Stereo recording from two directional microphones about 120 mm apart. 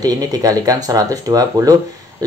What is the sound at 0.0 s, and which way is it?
Speech, 30° right (ahead or behind).